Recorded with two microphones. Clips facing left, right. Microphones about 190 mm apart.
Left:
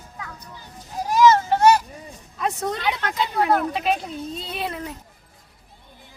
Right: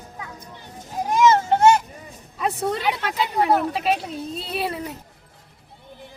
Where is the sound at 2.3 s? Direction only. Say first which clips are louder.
Right 2 dB; 5° right (ahead or behind).